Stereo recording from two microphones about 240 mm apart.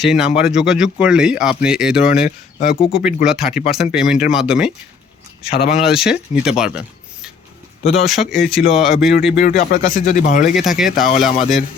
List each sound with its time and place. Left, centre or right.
0.0 s speech: centre
2.2 s speech: left
2.9 s speech: centre
5.5 s speech: left
5.7 s speech: centre
9.4 s speech: left
10.5 s speech: centre